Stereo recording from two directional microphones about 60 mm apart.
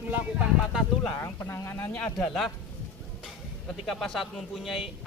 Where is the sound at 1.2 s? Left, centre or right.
Left.